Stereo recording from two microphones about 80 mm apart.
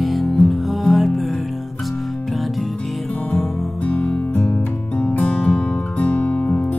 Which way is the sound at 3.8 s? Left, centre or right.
Centre.